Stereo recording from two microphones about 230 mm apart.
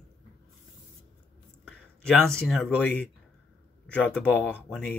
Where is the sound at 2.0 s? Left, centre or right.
Centre.